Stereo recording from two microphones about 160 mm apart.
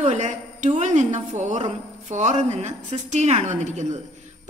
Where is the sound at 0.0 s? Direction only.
50° right (ahead or behind).